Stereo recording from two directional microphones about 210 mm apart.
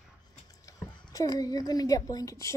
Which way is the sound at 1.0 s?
15° left (ahead or behind).